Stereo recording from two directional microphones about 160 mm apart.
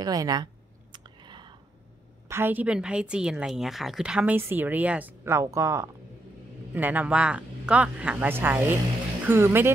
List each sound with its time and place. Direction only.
0.0 s speech: 25° right (ahead or behind)
0.9 s a sound: 30° right (ahead or behind)
2.2 s a woman's voice: 15° right (ahead or behind)